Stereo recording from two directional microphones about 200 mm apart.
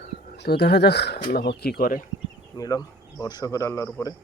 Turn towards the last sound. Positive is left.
turn(degrees=10)  # may be behind; listen again after turning